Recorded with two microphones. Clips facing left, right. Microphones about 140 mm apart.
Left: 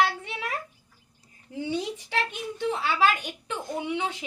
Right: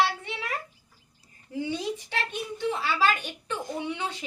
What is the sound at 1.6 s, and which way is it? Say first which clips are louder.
A child's voice: even; 10° left (ahead or behind).